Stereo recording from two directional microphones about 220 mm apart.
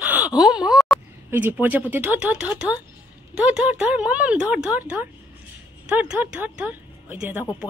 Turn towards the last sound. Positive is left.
turn(degrees=-5)  # may be behind; listen again after turning